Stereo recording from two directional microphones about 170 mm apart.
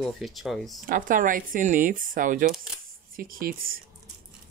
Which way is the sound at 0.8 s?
55° right (ahead or behind).